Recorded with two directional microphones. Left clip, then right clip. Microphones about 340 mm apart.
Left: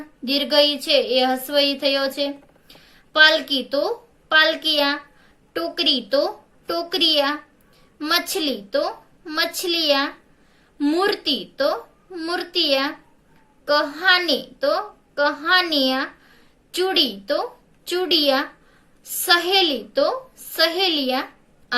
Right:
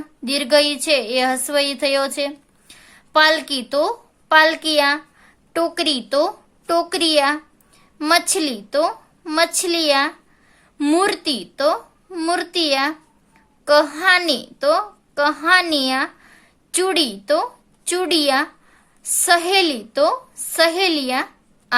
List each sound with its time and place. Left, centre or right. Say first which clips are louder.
0.3 s a woman's voice: right 1 dB; right